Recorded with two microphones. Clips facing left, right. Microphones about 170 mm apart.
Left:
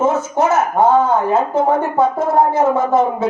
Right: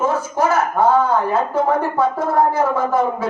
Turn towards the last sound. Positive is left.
turn(degrees=25)  # may be behind; listen again after turning